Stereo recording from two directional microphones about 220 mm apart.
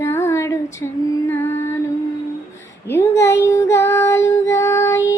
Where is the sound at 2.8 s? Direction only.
10° left (ahead or behind).